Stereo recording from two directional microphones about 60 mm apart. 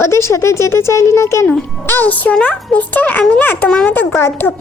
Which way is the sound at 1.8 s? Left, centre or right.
Left.